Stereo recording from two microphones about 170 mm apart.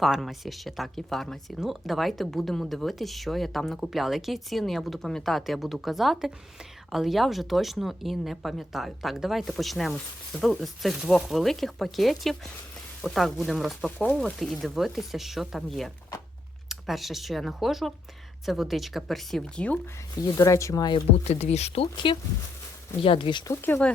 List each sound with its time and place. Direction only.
0.0 s speech: centre (ahead or behind)
20.2 s speech: 20° left (ahead or behind)
21.2 s speech: 40° left (ahead or behind)
23.5 s speech: 10° left (ahead or behind)